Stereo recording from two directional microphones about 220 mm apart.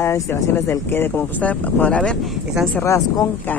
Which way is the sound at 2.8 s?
15° left (ahead or behind).